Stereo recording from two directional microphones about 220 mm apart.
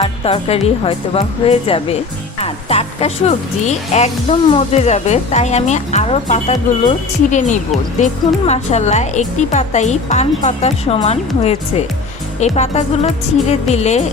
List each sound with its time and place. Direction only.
0.0 s a woman's voice: 25° left (ahead or behind)
12.5 s a woman's voice: 30° left (ahead or behind)